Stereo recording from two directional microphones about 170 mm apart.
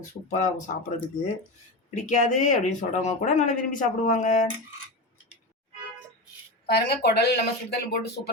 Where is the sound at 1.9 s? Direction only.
45° left (ahead or behind).